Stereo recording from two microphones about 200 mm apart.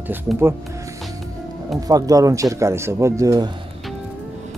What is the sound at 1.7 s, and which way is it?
Speech, 20° right (ahead or behind).